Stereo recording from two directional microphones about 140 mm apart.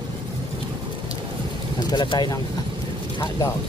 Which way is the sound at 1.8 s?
30° left (ahead or behind).